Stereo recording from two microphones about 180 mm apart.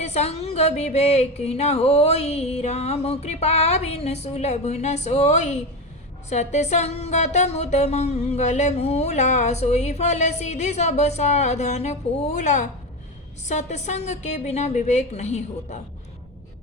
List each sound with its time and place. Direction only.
0.0 s speech: 35° left (ahead or behind)